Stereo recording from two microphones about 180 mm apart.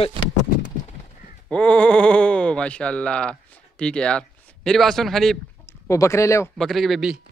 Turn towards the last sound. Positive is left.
turn(degrees=0)  # may be behind; listen again after turning